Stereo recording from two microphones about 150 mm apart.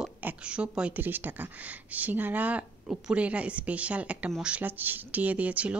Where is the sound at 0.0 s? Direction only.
10° right (ahead or behind).